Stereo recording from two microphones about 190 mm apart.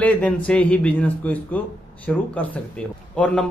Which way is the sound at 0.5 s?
5° left (ahead or behind).